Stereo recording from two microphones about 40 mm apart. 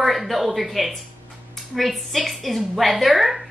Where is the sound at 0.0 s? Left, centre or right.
Centre.